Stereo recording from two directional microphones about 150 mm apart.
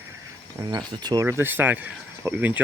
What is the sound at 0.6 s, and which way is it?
Speech, 20° right (ahead or behind).